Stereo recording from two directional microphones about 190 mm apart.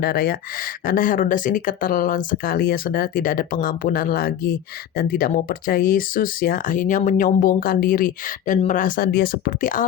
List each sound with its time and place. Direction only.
0.0 s speech: 50° left (ahead or behind)